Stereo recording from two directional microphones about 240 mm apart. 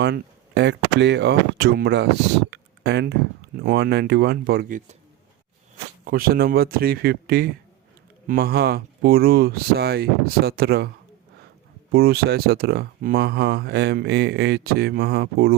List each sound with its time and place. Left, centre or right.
0.0 s speech: right
2.5 s a sound: right
3.6 s speech: right
6.1 s speech: right
11.9 s speech: right